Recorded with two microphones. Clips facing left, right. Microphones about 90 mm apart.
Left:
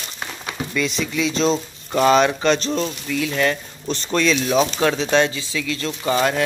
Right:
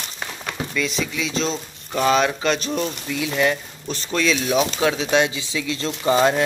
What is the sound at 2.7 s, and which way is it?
Speech, 15° right (ahead or behind).